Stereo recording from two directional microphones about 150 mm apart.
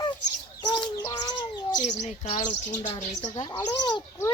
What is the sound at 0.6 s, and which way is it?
Bird, 30° left (ahead or behind).